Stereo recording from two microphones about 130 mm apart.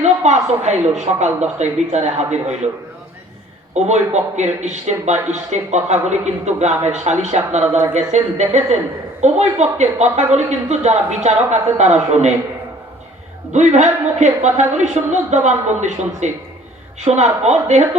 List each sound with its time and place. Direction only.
0.0 s speech: 60° right (ahead or behind)
3.8 s speech: 60° right (ahead or behind)
13.5 s speech: 65° right (ahead or behind)